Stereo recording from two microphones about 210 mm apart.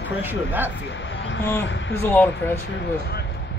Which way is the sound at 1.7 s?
60° left (ahead or behind).